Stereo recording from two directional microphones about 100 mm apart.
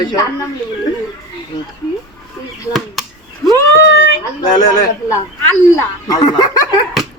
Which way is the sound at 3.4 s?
Centre (ahead or behind).